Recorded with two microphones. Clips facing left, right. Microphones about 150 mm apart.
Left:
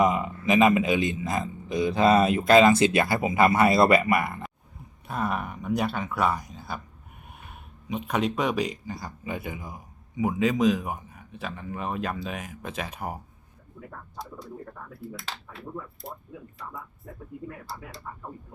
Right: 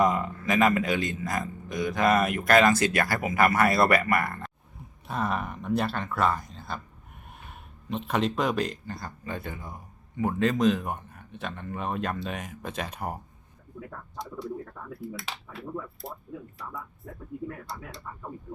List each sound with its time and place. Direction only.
0.0 s a man's voice: 20° left (ahead or behind)
4.3 s a sound: 5° left (ahead or behind)
5.6 s a man's voice: centre (ahead or behind)
6.4 s a sound: centre (ahead or behind)
7.4 s speech: 5° left (ahead or behind)
9.6 s a man's voice: centre (ahead or behind)